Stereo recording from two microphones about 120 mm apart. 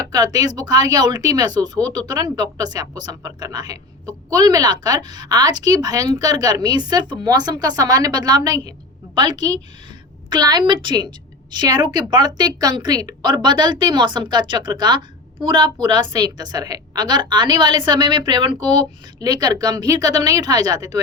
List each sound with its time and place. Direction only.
0.1 s speech: 35° right (ahead or behind)